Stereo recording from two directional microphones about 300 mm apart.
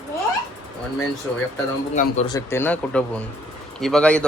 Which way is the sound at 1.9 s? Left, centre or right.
Left.